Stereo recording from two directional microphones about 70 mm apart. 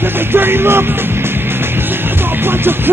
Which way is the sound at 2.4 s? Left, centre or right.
Right.